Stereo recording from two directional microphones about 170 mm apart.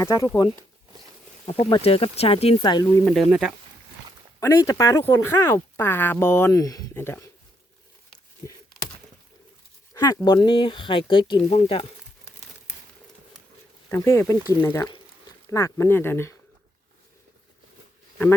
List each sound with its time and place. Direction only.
0.0 s speech: 20° left (ahead or behind)
1.7 s speech: 35° left (ahead or behind)
3.1 s speech: centre (ahead or behind)
4.4 s speech: 15° left (ahead or behind)
9.9 s a sound: 20° left (ahead or behind)
10.2 s speech: 25° left (ahead or behind)
13.9 s speech: 15° left (ahead or behind)